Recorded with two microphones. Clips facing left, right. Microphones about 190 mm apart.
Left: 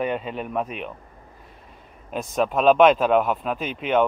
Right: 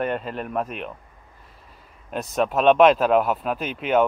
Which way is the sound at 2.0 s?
Centre (ahead or behind).